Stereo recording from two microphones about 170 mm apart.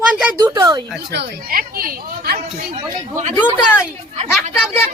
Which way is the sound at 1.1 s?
70° right (ahead or behind).